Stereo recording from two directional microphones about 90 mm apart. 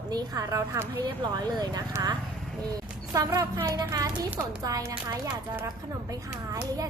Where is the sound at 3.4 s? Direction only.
35° right (ahead or behind).